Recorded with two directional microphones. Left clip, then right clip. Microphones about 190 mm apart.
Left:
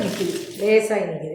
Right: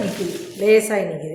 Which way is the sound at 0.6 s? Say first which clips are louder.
Right 2 dB; 40° right (ahead or behind).